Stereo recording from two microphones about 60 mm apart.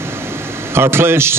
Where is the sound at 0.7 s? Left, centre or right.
Right.